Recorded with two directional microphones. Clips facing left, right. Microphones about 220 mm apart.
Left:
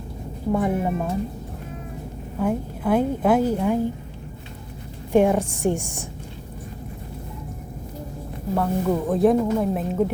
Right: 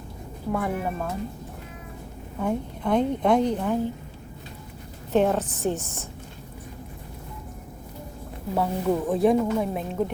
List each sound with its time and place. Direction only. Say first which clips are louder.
0.5 s speech: left 5 dB; 20° left (ahead or behind)
2.4 s a woman's voice: left 3 dB; 5° left (ahead or behind)
5.1 s a woman's voice: left 4 dB; 10° left (ahead or behind)
8.5 s speech: left 2 dB; 5° right (ahead or behind)